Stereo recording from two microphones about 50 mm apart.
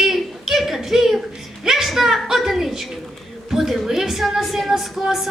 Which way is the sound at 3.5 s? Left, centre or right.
Centre.